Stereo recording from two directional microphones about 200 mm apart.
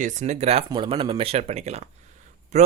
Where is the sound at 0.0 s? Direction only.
35° right (ahead or behind).